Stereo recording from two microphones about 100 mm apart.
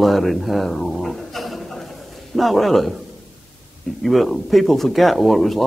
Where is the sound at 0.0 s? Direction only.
Centre (ahead or behind).